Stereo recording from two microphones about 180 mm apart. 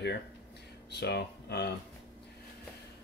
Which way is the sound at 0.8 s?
65° left (ahead or behind).